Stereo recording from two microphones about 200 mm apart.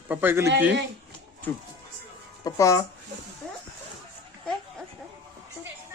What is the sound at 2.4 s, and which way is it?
Speech, 15° left (ahead or behind).